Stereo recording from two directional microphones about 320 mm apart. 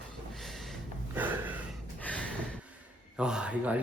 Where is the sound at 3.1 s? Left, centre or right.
Centre.